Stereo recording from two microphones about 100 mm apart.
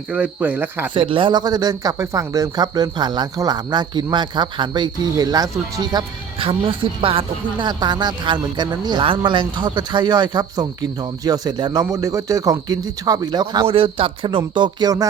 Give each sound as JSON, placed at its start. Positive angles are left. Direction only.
{"t": 0.1, "sound": "speech", "side_deg": -15}
{"t": 0.9, "sound": "speech", "side_deg": -60}
{"t": 6.4, "sound": "speech", "side_deg": -65}
{"t": 7.7, "sound": "speech", "side_deg": -45}
{"t": 9.0, "sound": "speech", "side_deg": -55}
{"t": 13.7, "sound": "speech", "side_deg": -70}